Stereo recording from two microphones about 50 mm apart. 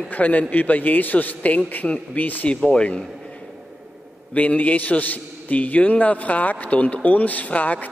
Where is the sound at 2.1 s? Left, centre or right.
Left.